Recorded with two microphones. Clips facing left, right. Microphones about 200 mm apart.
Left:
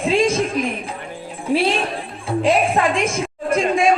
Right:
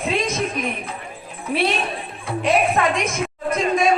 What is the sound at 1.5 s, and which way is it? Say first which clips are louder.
A woman's voice: left 3 dB; 30° left (ahead or behind).